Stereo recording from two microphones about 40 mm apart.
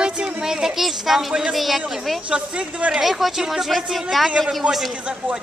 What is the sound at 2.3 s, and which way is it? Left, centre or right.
Speech, right.